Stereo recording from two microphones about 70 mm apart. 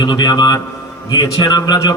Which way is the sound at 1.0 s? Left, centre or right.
Left.